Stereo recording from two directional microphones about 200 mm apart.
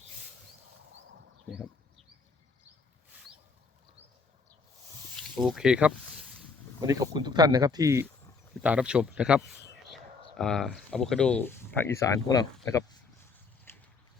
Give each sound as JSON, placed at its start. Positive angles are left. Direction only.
{"t": 5.1, "sound": "snake", "side_deg": 0}
{"t": 6.8, "sound": "speech", "side_deg": -20}
{"t": 13.7, "sound": "a sound", "side_deg": 10}